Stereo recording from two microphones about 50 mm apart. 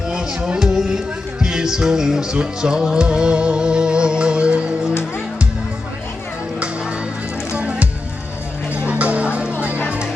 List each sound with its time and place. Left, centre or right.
0.1 s music: centre
7.5 s music: right